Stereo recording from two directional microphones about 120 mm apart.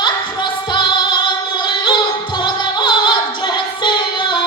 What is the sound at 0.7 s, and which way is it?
Music, 40° left (ahead or behind).